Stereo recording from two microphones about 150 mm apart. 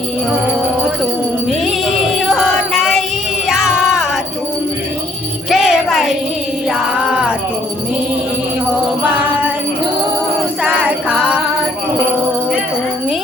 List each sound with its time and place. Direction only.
1.5 s music: centre (ahead or behind)
5.5 s jingle bell: centre (ahead or behind)
6.7 s music: 5° right (ahead or behind)
10.6 s music: 10° right (ahead or behind)